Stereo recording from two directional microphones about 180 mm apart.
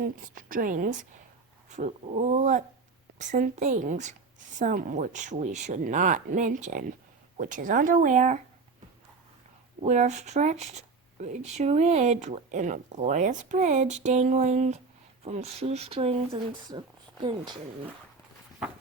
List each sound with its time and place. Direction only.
0.3 s speech: 50° right (ahead or behind)
9.8 s speech: 40° right (ahead or behind); by 17.6 s 25° right (ahead or behind)